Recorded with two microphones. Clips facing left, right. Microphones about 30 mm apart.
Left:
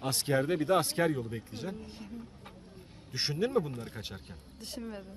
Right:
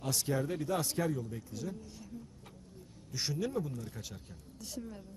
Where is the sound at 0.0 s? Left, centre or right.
Left.